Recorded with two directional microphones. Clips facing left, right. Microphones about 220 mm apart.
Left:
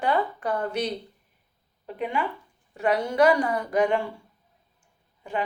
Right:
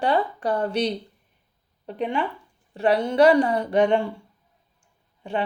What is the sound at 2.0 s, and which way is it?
Speech, 30° right (ahead or behind).